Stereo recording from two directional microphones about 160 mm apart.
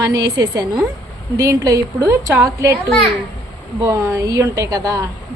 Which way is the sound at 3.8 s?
20° right (ahead or behind).